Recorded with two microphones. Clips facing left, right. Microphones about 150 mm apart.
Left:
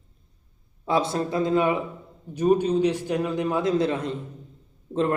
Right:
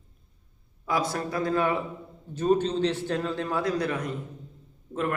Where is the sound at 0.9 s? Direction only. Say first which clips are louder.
Left 4 dB; 25° left (ahead or behind).